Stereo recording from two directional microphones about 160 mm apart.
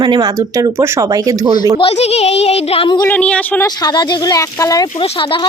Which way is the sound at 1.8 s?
40° left (ahead or behind).